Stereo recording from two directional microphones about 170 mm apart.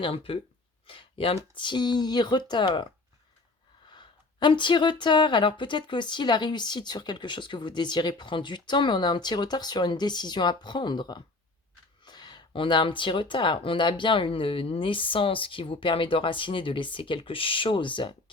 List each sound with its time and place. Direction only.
0.0 s speech: 35° left (ahead or behind)